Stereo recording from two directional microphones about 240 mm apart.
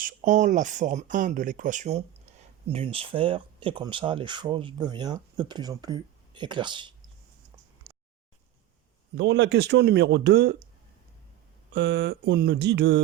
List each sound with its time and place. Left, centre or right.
0.0 s speech: right
9.1 s speech: right
11.7 s speech: right